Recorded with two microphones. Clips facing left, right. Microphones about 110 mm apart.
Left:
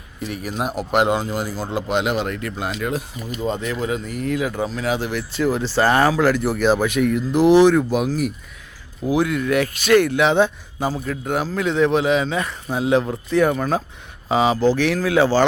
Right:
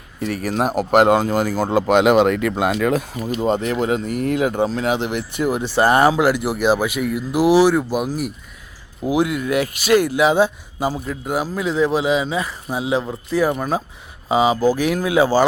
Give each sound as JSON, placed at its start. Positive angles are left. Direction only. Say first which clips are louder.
{"t": 0.2, "sound": "a man's voice", "louder": "right 5 dB", "side_deg": -45}
{"t": 2.9, "sound": "a man's voice", "louder": "right 5 dB", "side_deg": -55}
{"t": 3.3, "sound": "speech", "louder": "right 5 dB", "side_deg": -35}
{"t": 4.9, "sound": "speech", "louder": "right 1 dB", "side_deg": -20}